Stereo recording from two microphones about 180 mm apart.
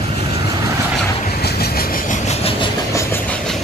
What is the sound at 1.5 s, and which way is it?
Train, 55° left (ahead or behind).